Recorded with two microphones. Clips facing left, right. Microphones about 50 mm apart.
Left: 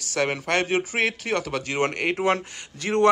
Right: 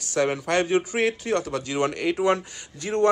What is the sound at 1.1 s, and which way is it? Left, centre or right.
Speech, left.